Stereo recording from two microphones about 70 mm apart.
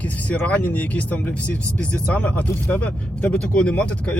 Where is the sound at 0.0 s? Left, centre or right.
Left.